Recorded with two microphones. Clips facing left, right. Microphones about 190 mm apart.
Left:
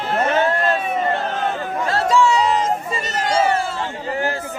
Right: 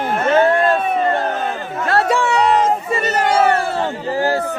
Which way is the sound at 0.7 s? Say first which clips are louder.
Right 3 dB; 55° right (ahead or behind).